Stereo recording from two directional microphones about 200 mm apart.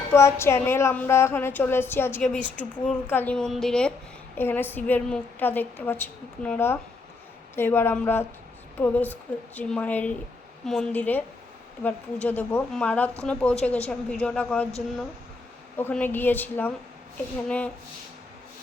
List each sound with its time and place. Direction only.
0.1 s a woman's voice: 15° left (ahead or behind)
15.8 s a woman's voice: 10° left (ahead or behind)